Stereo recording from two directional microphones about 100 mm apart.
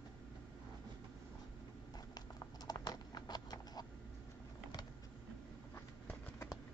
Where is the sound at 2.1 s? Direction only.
40° left (ahead or behind).